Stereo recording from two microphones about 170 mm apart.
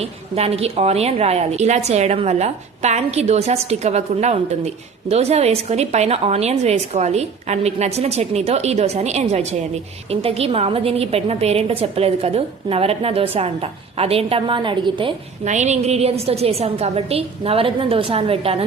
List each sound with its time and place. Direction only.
0.0 s a woman's voice: 35° right (ahead or behind)
15.4 s a woman's voice: 45° right (ahead or behind)